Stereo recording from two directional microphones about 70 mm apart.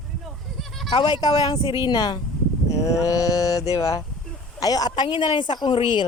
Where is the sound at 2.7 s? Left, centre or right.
Left.